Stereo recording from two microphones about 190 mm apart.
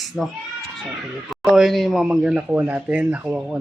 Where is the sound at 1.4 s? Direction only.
Centre (ahead or behind).